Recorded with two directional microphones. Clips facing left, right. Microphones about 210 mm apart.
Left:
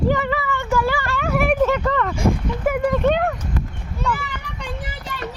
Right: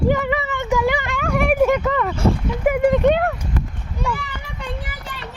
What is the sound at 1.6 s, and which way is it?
Speech, 15° right (ahead or behind).